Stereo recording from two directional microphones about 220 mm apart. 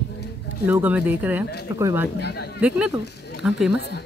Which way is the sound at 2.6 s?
5° right (ahead or behind).